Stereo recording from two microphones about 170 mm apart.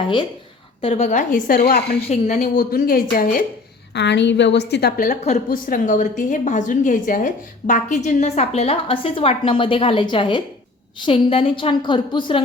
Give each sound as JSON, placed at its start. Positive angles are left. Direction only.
{"t": 0.8, "sound": "a woman's voice", "side_deg": 40}
{"t": 2.0, "sound": "a woman's voice", "side_deg": 45}
{"t": 3.9, "sound": "a woman's voice", "side_deg": 90}
{"t": 5.2, "sound": "a woman's voice", "side_deg": 45}